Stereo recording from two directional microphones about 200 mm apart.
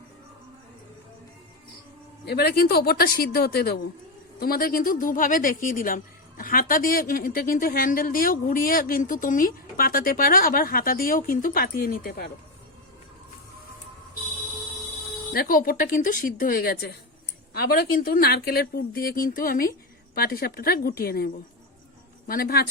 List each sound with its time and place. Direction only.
2.2 s speech: 55° left (ahead or behind)
15.3 s speech: 45° left (ahead or behind)
22.3 s speech: 45° left (ahead or behind)